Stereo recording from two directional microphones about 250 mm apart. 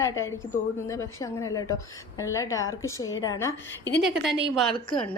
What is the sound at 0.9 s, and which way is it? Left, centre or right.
A woman's voice, centre.